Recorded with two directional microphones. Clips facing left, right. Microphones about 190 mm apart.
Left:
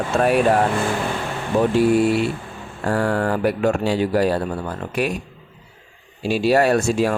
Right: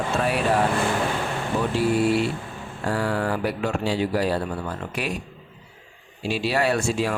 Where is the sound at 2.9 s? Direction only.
50° left (ahead or behind).